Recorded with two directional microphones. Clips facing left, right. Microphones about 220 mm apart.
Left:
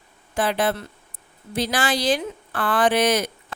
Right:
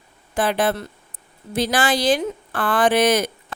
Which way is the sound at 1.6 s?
50° right (ahead or behind).